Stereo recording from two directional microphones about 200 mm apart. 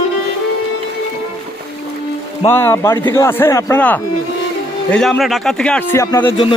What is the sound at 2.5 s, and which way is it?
A man's voice, 10° left (ahead or behind).